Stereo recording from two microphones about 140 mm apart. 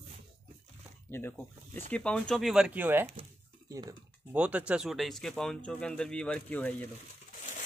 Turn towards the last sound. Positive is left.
turn(degrees=10)  # may be behind; listen again after turning